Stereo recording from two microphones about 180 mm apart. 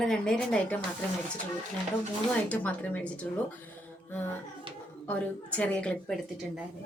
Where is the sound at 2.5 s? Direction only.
10° left (ahead or behind).